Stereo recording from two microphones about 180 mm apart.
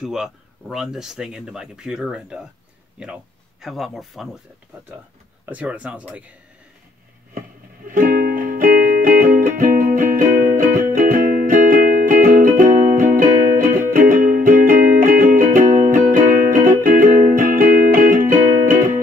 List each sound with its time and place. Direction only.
0.0 s speech: 5° right (ahead or behind)
5.4 s speech: 10° right (ahead or behind)
7.9 s music: 50° right (ahead or behind)